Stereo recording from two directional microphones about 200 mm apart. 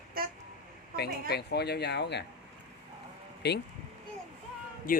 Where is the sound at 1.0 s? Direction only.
55° left (ahead or behind).